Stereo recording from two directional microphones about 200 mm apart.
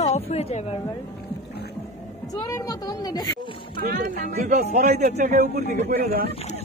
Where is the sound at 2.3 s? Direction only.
15° left (ahead or behind).